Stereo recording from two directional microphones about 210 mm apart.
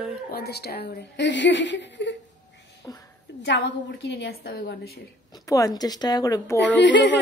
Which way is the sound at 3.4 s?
55° left (ahead or behind).